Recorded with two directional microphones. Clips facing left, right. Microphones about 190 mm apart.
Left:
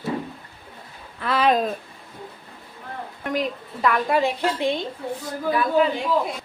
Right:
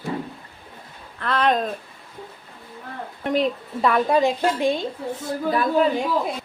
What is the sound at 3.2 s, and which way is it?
Speech, 30° right (ahead or behind).